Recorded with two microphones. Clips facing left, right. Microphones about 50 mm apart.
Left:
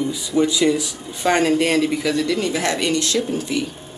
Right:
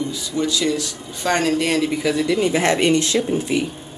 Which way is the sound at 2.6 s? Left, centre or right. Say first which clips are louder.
Right 4 dB; right.